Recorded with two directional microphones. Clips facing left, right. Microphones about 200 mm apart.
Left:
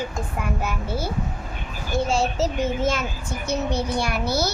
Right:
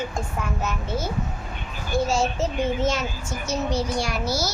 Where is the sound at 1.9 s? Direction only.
25° left (ahead or behind).